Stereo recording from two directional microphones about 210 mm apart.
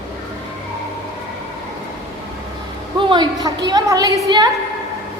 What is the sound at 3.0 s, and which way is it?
A woman's voice, 20° right (ahead or behind).